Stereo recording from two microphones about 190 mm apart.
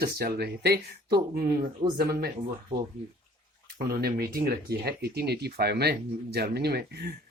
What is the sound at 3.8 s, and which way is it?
Speech, 50° right (ahead or behind).